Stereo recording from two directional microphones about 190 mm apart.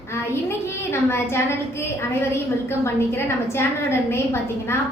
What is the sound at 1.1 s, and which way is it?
Speech, 15° left (ahead or behind).